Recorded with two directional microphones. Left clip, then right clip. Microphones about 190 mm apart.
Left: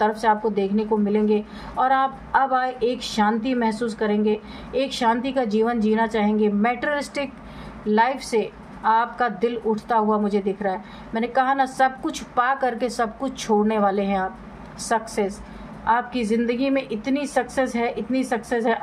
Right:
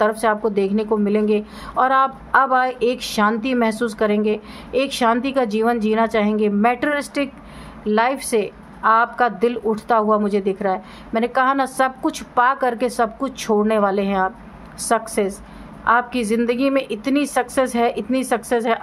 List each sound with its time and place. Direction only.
0.0 s a woman's voice: 30° right (ahead or behind)